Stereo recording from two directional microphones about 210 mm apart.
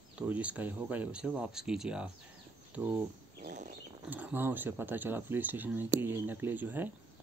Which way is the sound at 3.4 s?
40° right (ahead or behind).